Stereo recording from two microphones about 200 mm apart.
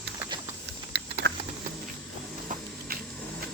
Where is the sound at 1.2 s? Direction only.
60° right (ahead or behind).